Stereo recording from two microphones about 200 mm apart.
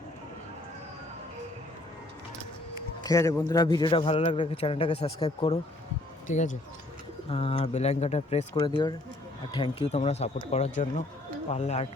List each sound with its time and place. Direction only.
3.0 s a man's voice: 15° left (ahead or behind); by 11.9 s 30° left (ahead or behind)